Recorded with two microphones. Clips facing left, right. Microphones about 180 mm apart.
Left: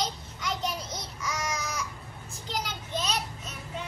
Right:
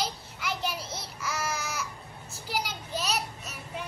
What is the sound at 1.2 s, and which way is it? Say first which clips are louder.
Babbling: even; 5° right (ahead or behind).